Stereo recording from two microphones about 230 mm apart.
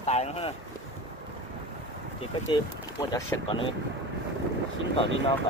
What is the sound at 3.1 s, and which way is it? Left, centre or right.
Speech, centre.